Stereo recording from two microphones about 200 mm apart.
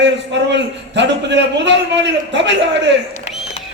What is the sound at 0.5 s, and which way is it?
A man's voice, 60° right (ahead or behind).